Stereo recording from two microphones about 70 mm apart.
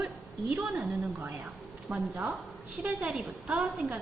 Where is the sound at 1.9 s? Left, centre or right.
Right.